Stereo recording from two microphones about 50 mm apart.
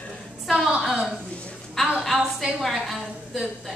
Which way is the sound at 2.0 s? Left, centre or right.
Centre.